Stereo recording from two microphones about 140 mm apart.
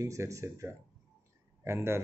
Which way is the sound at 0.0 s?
20° right (ahead or behind).